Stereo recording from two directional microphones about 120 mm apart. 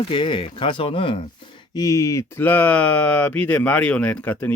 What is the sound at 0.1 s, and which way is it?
Speech, 45° left (ahead or behind).